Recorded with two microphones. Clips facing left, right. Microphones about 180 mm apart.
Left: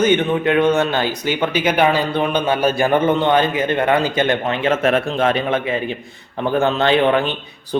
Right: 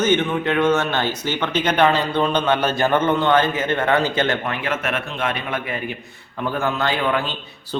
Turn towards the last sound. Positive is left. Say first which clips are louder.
# left 6 dB
turn(degrees=20)  # may be behind; listen again after turning